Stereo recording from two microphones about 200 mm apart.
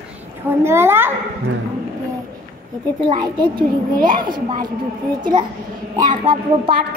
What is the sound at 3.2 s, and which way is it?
Speech, 20° right (ahead or behind).